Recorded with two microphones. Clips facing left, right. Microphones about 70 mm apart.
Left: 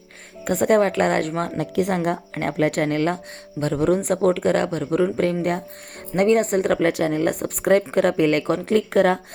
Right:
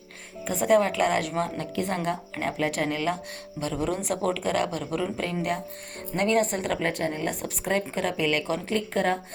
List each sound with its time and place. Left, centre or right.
0.4 s speech: left
1.7 s speech: left
6.8 s speech: left
7.4 s speech: left